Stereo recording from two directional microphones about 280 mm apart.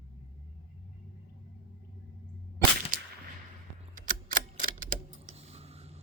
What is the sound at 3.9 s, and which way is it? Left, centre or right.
Typewriter, right.